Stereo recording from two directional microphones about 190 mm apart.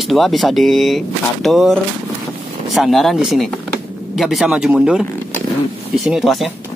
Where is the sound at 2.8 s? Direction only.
Centre (ahead or behind).